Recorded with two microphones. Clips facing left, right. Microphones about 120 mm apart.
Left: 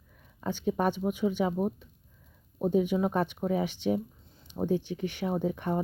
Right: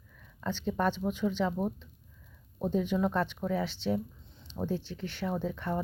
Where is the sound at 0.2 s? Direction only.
15° left (ahead or behind).